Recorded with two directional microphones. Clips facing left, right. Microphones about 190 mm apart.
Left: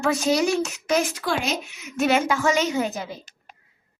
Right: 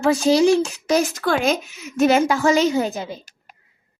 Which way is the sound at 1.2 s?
55° right (ahead or behind).